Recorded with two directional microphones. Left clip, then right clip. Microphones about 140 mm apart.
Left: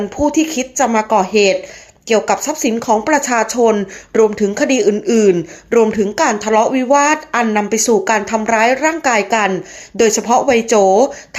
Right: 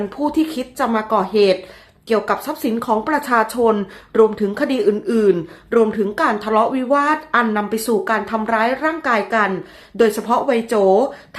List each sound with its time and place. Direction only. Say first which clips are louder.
0.2 s speech: left 5 dB; 15° left (ahead or behind)